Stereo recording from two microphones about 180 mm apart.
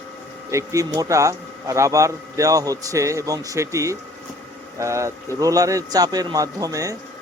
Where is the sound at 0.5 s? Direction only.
15° right (ahead or behind).